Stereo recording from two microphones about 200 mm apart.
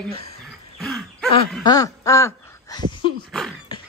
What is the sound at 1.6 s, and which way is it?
Speech, 15° left (ahead or behind).